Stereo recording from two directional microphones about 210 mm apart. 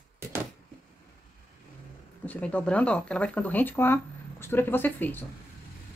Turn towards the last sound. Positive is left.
turn(degrees=10)  # may be behind; listen again after turning